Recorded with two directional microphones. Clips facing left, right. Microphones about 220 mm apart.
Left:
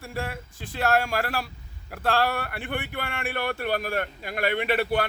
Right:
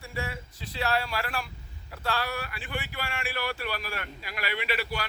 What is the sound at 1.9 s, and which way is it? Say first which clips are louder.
Speech: left 7 dB; 55° left (ahead or behind).